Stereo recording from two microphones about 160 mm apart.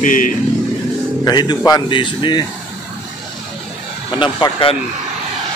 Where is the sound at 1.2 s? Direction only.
25° left (ahead or behind).